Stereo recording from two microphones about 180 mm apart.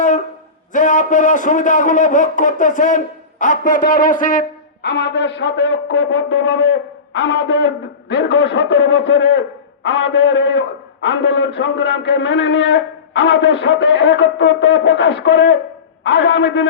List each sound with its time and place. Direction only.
0.7 s a man's voice: 45° left (ahead or behind)
4.8 s a man's voice: 75° left (ahead or behind); by 16.6 s 90° left